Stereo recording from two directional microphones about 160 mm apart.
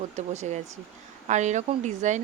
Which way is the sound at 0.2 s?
45° right (ahead or behind).